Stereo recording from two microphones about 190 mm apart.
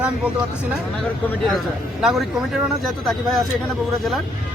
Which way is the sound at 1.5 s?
Centre (ahead or behind).